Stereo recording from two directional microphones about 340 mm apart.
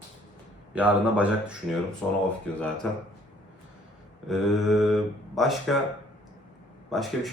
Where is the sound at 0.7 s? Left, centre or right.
Centre.